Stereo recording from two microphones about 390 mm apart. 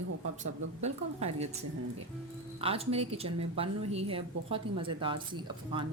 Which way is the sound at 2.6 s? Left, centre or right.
Centre.